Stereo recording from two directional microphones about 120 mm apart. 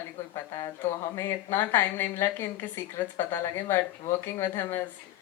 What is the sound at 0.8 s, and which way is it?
Speech, 20° left (ahead or behind).